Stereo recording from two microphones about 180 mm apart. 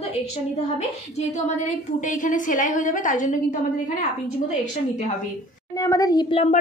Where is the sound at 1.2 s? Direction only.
40° left (ahead or behind).